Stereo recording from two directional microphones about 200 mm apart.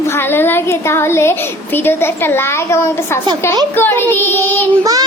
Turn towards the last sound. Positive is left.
turn(degrees=-20)  # may be behind; listen again after turning